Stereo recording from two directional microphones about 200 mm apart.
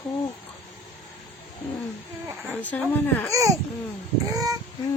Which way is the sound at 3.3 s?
15° right (ahead or behind).